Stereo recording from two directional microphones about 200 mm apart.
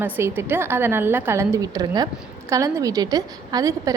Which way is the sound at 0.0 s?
10° right (ahead or behind).